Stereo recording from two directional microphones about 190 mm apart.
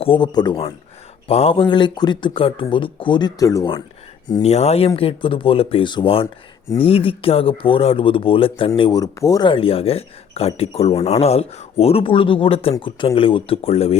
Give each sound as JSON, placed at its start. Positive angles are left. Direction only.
{"t": 0.0, "sound": "speech", "side_deg": 25}
{"t": 4.4, "sound": "speech", "side_deg": 35}